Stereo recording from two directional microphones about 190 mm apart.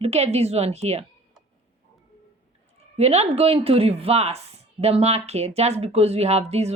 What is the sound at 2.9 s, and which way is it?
A woman's voice, 35° right (ahead or behind).